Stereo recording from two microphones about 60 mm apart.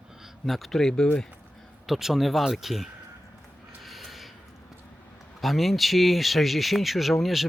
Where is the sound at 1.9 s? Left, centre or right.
Centre.